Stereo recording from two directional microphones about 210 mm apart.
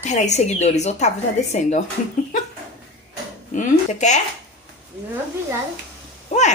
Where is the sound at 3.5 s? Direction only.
35° left (ahead or behind).